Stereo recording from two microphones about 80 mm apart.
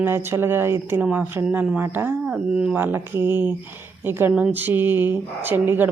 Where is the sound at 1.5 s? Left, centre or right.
Centre.